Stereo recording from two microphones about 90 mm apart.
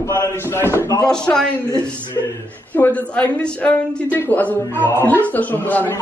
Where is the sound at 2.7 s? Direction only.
20° left (ahead or behind).